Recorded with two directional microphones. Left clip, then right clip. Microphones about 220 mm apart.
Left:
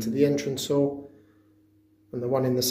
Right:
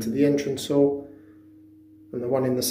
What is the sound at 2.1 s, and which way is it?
Speech, 15° left (ahead or behind).